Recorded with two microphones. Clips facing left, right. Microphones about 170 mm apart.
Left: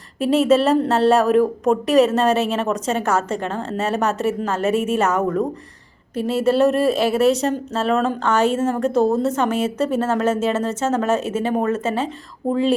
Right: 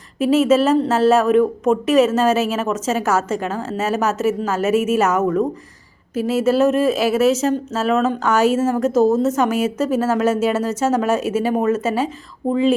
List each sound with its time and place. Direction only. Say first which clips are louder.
0.2 s a woman's voice: right 1 dB; 5° right (ahead or behind)
9.5 s a woman's voice: right 1 dB; 30° left (ahead or behind)
9.9 s speech: right 3 dB; 5° right (ahead or behind)